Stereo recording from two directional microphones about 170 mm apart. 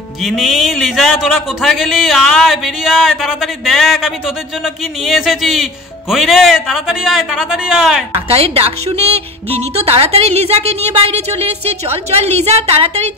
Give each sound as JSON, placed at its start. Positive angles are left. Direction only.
{"t": 0.2, "sound": "speech", "side_deg": 0}
{"t": 8.1, "sound": "a woman's voice", "side_deg": -35}